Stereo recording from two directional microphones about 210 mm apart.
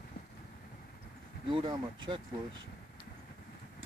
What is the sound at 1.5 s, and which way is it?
Speech, 25° right (ahead or behind).